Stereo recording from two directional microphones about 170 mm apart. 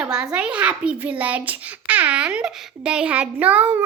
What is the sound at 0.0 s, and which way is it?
A child's voice, 5° right (ahead or behind).